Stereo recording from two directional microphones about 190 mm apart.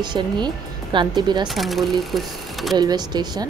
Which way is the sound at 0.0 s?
25° right (ahead or behind).